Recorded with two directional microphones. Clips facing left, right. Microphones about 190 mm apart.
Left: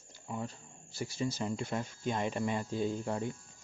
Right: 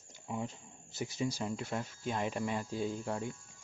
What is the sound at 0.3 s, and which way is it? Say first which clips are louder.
Speech: right 1 dB; 15° right (ahead or behind).